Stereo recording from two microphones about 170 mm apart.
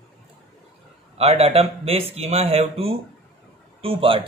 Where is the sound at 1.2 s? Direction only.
35° right (ahead or behind).